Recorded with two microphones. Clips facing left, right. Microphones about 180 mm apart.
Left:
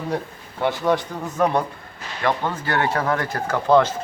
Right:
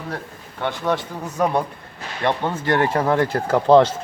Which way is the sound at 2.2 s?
25° right (ahead or behind).